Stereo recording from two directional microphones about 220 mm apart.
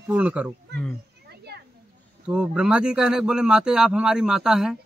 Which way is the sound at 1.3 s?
45° right (ahead or behind).